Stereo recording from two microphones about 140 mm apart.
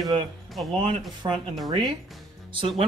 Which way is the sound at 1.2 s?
35° right (ahead or behind).